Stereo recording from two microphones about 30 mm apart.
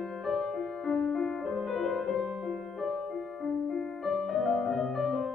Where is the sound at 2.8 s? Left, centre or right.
Centre.